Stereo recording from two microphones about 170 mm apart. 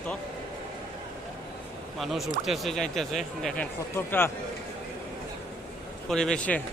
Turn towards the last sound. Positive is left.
turn(degrees=5)  # may be behind; listen again after turning